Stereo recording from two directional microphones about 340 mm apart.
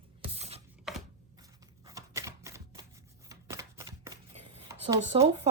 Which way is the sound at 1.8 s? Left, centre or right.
Centre.